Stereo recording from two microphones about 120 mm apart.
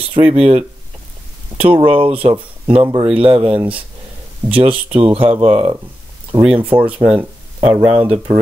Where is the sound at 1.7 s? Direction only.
45° right (ahead or behind).